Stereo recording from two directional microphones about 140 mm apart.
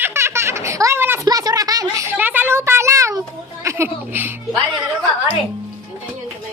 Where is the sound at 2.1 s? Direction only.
15° right (ahead or behind).